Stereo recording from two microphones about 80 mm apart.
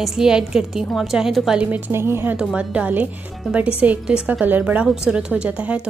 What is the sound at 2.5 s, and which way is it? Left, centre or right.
A woman's voice, centre.